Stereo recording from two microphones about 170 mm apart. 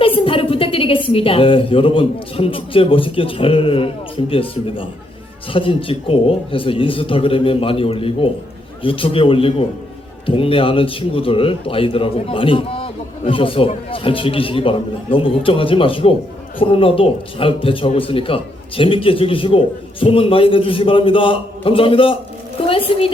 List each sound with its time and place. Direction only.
0.0 s a woman's voice: 30° left (ahead or behind)